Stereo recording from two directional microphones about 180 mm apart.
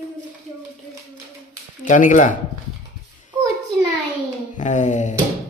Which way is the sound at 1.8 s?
45° left (ahead or behind).